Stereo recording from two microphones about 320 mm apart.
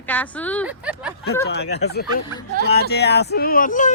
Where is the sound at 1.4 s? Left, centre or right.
Left.